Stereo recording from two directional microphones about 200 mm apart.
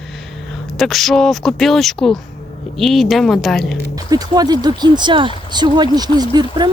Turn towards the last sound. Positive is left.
turn(degrees=-20)  # may be behind; listen again after turning